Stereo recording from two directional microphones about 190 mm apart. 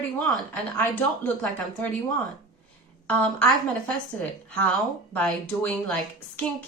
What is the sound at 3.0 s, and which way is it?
A woman's voice, 5° left (ahead or behind).